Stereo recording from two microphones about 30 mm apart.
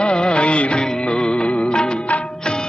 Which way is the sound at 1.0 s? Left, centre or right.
Left.